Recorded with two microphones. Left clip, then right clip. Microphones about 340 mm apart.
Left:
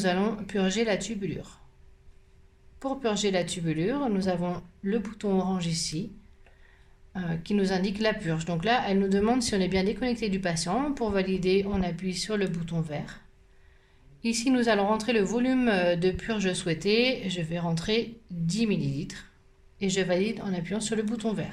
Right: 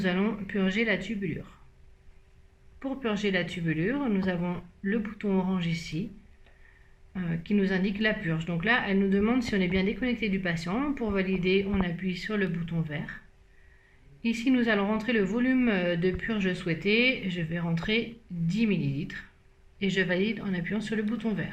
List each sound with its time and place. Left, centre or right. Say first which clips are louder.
0.0 s speech: left 2 dB; left
2.8 s speech: left 3 dB; left
7.1 s speech: even; left
14.2 s speech: left 1 dB; left